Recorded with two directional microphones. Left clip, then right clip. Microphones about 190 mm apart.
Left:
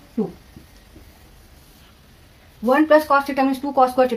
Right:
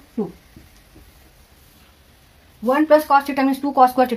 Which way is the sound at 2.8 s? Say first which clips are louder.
Right 2 dB; 40° right (ahead or behind).